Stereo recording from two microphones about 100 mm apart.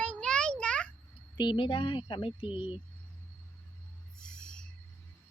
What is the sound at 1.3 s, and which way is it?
Speech, 55° left (ahead or behind).